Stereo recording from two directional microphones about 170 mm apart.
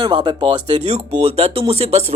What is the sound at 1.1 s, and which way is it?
Speech, 40° right (ahead or behind).